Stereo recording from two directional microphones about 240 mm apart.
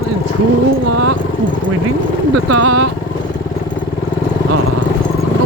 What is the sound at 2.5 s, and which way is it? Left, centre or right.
Vehicle, right.